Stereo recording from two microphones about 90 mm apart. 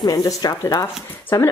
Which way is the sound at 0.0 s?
45° left (ahead or behind).